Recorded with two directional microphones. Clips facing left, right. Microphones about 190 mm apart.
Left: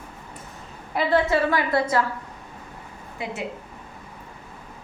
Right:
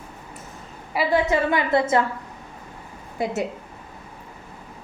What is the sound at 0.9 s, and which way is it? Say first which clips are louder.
A woman's voice: even; 15° right (ahead or behind).